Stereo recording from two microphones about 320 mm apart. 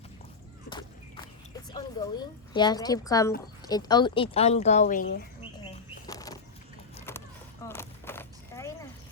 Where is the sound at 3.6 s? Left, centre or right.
Centre.